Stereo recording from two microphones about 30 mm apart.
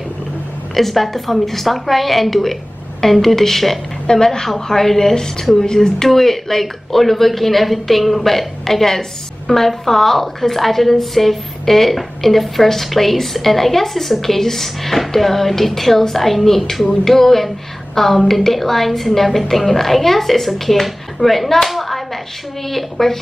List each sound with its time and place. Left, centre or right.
0.7 s a woman's voice: centre
4.1 s a woman's voice: centre
21.7 s clapping: centre
22.7 s a woman's voice: centre